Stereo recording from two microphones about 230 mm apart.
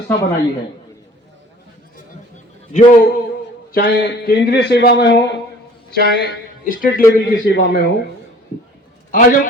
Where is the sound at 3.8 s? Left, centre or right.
Left.